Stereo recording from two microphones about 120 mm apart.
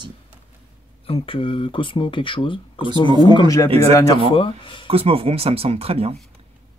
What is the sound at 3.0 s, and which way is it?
Speech, 35° right (ahead or behind).